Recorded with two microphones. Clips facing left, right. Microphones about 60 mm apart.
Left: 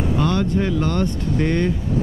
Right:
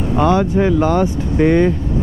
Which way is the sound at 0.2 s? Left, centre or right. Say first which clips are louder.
Right 8 dB; centre.